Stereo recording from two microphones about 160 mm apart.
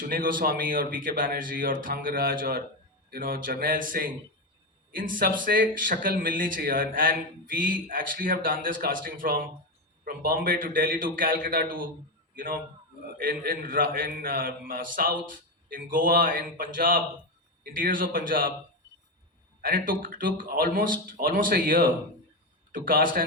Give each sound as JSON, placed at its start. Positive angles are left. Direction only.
{"t": 0.0, "sound": "speech", "side_deg": -60}
{"t": 13.1, "sound": "speech", "side_deg": -65}
{"t": 19.6, "sound": "speech", "side_deg": -60}